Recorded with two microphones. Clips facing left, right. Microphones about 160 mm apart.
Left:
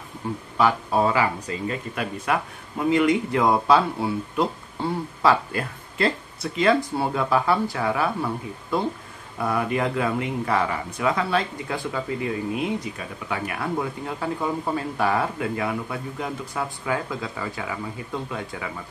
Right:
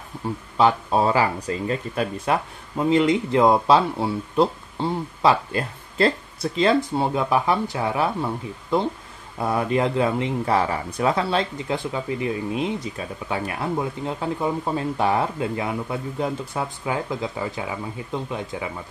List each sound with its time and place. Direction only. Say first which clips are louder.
0.6 s speech: right 2 dB; 25° right (ahead or behind)